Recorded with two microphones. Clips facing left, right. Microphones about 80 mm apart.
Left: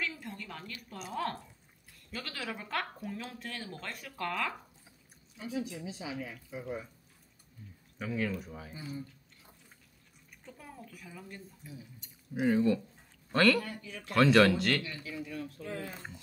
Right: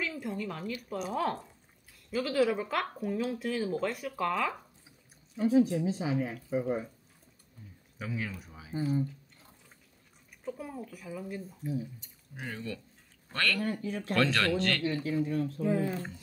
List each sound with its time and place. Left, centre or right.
0.0 s a woman's voice: centre
5.4 s speech: right
8.0 s speech: centre
10.4 s speech: centre
12.4 s speech: centre
13.6 s speech: right
14.1 s speech: centre
14.8 s speech: right
15.6 s speech: centre